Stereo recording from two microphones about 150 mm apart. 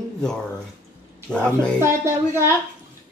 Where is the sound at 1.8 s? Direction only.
20° right (ahead or behind).